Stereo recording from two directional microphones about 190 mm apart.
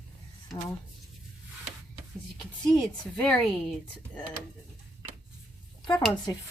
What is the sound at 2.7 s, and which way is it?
A woman's voice, 5° left (ahead or behind).